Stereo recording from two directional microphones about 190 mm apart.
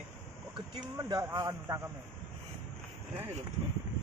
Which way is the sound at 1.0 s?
20° right (ahead or behind).